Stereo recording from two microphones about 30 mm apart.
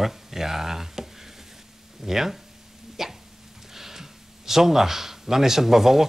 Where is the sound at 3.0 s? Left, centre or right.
Centre.